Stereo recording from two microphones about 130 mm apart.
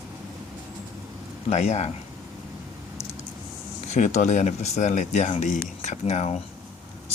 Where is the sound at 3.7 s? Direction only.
65° left (ahead or behind).